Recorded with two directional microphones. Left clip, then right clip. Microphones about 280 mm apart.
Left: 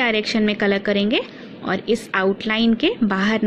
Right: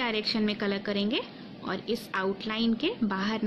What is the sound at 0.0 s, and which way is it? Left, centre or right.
A woman's voice, centre.